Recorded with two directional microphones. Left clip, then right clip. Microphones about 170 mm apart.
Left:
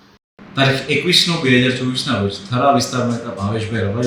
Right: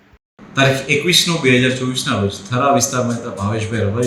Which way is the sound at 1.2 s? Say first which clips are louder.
Right 1 dB; centre (ahead or behind).